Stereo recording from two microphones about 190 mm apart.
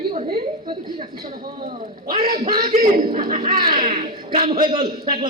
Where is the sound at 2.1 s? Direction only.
50° right (ahead or behind).